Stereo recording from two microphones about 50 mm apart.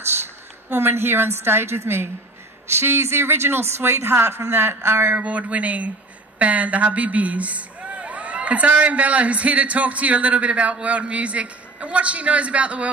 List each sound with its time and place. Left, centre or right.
0.7 s speech: right
5.2 s a man's voice: right